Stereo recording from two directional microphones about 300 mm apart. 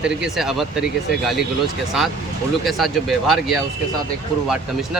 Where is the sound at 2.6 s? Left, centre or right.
Centre.